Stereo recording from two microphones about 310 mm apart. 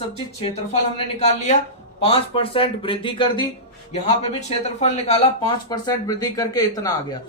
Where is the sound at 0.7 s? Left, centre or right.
Left.